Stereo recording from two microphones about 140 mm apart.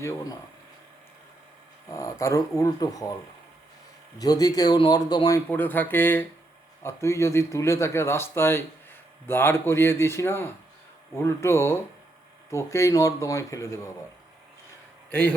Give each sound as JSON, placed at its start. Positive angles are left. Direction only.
{"t": 0.0, "sound": "speech", "side_deg": 20}
{"t": 2.0, "sound": "speech", "side_deg": 20}
{"t": 4.2, "sound": "speech", "side_deg": 25}
{"t": 5.5, "sound": "a man's voice", "side_deg": 15}
{"t": 15.1, "sound": "a man's voice", "side_deg": 15}